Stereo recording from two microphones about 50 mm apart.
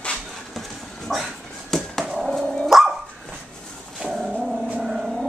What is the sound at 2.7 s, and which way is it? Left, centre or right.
Dog, centre.